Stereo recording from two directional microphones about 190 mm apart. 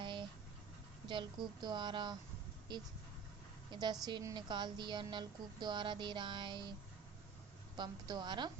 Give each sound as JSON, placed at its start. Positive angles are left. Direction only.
{"t": 0.0, "sound": "vehicle", "side_deg": -25}
{"t": 1.0, "sound": "a woman's voice", "side_deg": -25}
{"t": 7.8, "sound": "speech", "side_deg": -20}